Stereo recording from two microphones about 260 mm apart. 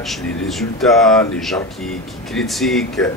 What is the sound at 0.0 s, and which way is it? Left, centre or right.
A man's voice, centre.